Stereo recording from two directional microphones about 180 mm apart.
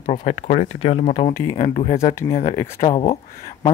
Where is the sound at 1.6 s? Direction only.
40° left (ahead or behind).